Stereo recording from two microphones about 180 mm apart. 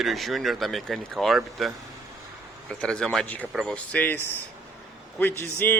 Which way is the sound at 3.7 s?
10° left (ahead or behind).